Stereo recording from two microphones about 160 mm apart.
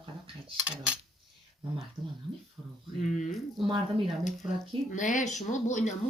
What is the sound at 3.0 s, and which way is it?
Speech, 50° left (ahead or behind).